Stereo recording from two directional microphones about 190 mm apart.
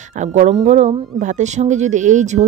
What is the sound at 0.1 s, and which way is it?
Speech, 40° right (ahead or behind).